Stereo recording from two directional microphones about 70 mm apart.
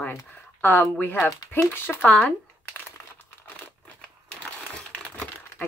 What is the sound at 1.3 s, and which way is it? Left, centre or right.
Speech, left.